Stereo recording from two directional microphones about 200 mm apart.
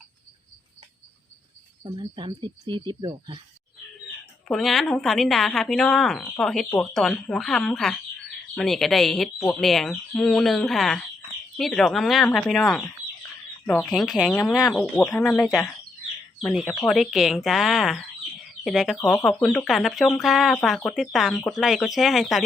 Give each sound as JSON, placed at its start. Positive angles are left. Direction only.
{"t": 1.8, "sound": "speech", "side_deg": -25}
{"t": 4.4, "sound": "speech", "side_deg": 0}